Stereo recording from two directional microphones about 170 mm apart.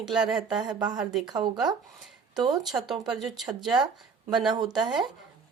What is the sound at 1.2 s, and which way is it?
Speech, 25° right (ahead or behind).